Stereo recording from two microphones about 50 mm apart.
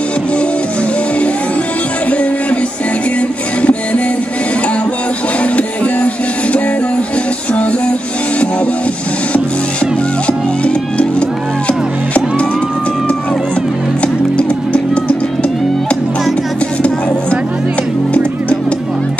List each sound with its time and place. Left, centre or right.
3.2 s music: left
10.2 s music: left
14.0 s music: left